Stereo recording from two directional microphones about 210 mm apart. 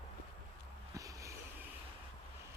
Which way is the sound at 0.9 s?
15° right (ahead or behind).